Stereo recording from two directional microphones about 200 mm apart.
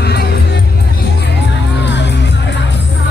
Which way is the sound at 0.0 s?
55° left (ahead or behind).